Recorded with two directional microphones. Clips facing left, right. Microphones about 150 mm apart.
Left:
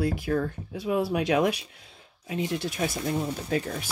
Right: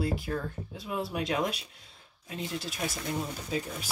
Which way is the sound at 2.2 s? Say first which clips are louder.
Left 7 dB; 65° left (ahead or behind).